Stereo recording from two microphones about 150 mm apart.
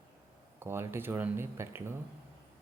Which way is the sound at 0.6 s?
15° right (ahead or behind).